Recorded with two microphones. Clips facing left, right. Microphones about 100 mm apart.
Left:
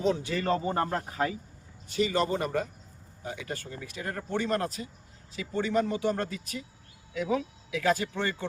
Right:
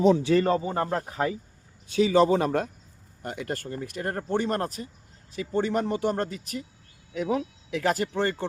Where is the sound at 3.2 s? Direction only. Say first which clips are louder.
Right 4 dB; 60° right (ahead or behind).